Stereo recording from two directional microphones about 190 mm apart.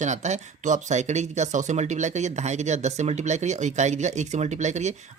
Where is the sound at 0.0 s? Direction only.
40° right (ahead or behind).